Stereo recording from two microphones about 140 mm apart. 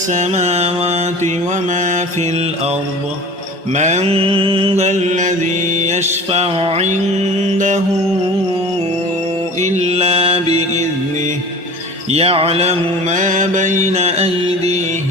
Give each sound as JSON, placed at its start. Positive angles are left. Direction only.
{"t": 0.1, "sound": "mantra", "side_deg": -55}
{"t": 1.7, "sound": "mantra", "side_deg": -60}
{"t": 3.8, "sound": "mantra", "side_deg": -55}
{"t": 4.9, "sound": "mantra", "side_deg": -60}
{"t": 9.6, "sound": "mantra", "side_deg": -55}
{"t": 12.1, "sound": "mantra", "side_deg": -45}